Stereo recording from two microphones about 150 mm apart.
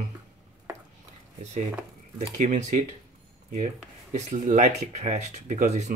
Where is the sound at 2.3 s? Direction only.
60° right (ahead or behind).